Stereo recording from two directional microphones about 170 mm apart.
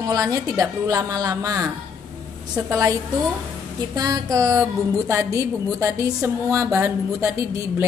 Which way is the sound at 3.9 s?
20° right (ahead or behind).